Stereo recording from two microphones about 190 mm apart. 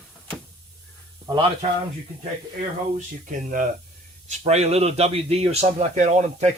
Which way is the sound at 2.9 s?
45° right (ahead or behind).